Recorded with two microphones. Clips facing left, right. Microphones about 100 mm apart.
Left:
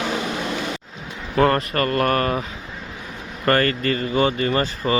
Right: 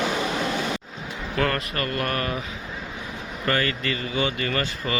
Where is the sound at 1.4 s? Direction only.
35° left (ahead or behind).